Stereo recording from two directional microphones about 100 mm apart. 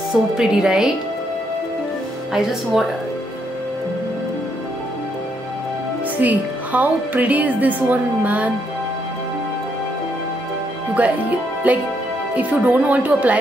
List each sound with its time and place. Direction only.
0.1 s speech: 5° right (ahead or behind)
2.3 s speech: 5° right (ahead or behind)
6.2 s a woman's voice: 15° right (ahead or behind)
11.0 s a woman's voice: 15° right (ahead or behind)